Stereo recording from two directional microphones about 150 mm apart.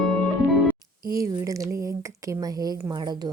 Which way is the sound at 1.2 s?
20° right (ahead or behind).